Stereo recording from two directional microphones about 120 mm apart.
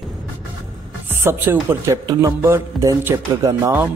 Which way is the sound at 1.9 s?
30° right (ahead or behind).